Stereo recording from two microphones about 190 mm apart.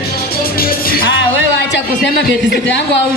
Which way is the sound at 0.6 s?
50° left (ahead or behind).